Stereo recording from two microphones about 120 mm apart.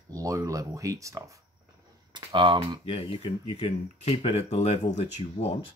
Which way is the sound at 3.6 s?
65° left (ahead or behind).